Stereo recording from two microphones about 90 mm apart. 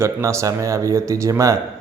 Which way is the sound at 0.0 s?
35° right (ahead or behind).